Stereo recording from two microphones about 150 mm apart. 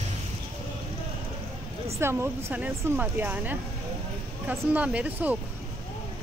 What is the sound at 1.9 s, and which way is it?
Speech, 15° right (ahead or behind).